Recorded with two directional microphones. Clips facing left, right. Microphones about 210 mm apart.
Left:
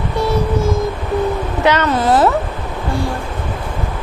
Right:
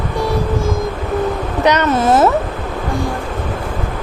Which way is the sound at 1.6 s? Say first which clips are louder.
Right 1 dB; 20° right (ahead or behind).